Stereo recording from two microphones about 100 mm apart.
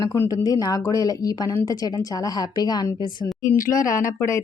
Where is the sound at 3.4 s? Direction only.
30° left (ahead or behind).